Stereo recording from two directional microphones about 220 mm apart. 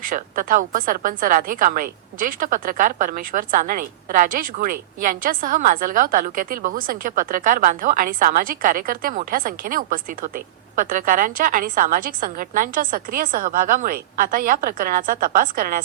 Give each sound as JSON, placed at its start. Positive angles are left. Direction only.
{"t": 0.0, "sound": "a woman's voice", "side_deg": -40}